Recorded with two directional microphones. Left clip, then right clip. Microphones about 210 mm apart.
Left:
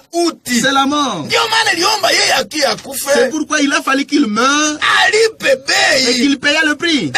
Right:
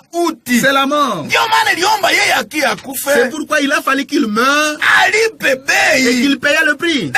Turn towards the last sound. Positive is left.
turn(degrees=-30)  # may be behind; listen again after turning